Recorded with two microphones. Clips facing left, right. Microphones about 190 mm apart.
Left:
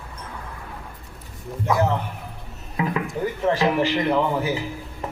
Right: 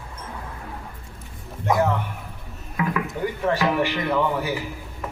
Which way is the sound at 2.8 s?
25° left (ahead or behind).